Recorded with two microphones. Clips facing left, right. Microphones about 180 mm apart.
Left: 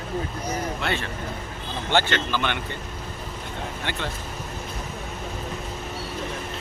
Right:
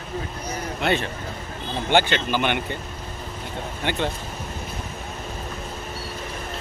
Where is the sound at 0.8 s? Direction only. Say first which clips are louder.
Right 4 dB; 20° right (ahead or behind).